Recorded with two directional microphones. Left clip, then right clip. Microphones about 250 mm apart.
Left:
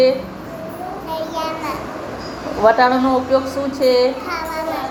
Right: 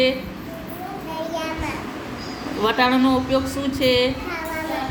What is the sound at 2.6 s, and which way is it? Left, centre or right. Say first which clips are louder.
Speech: left 6 dB; right.